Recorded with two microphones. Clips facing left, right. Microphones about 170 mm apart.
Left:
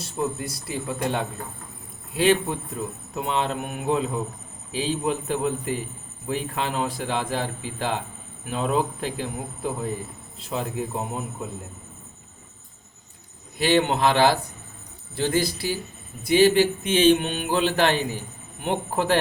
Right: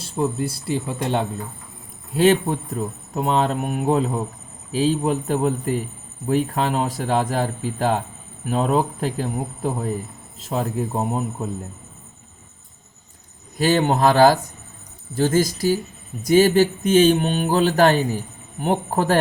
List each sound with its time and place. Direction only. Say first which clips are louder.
0.0 s speech: right 5 dB; 30° right (ahead or behind)
2.1 s speech: right 4 dB; 40° right (ahead or behind)
10.4 s speech: right 4 dB; 40° right (ahead or behind)
13.6 s speech: right 3 dB; 40° right (ahead or behind)